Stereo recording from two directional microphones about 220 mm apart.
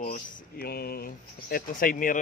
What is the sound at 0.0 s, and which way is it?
Speech, 40° left (ahead or behind).